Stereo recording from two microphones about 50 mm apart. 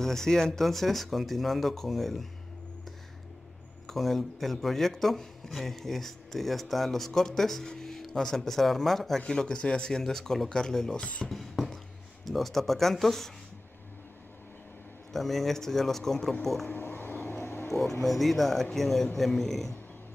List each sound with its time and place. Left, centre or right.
0.0 s speech: centre
3.8 s speech: centre
9.2 s speech: centre
11.0 s speech: left
11.2 s a sound: centre
12.3 s speech: centre
15.1 s speech: centre
16.6 s a sound: left
18.0 s speech: centre